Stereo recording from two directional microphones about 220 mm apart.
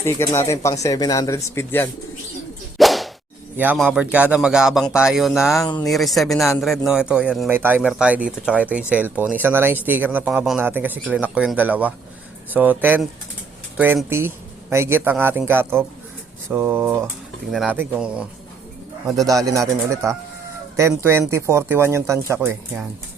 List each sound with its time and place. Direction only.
0.0 s speech: 10° left (ahead or behind)
2.7 s whip: centre (ahead or behind)
3.6 s a man's voice: 5° right (ahead or behind)
20.7 s speech: 10° right (ahead or behind)